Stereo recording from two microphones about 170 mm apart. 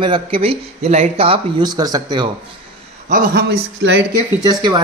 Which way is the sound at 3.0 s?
50° right (ahead or behind).